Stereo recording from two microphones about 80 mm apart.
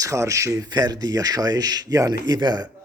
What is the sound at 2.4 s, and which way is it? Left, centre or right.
Speech, right.